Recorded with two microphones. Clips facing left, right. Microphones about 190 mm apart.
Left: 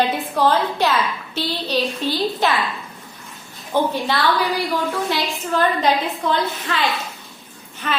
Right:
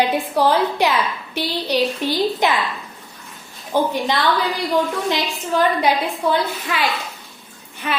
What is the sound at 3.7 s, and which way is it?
Speech, 15° right (ahead or behind).